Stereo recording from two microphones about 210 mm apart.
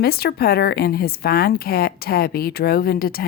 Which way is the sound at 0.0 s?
50° left (ahead or behind).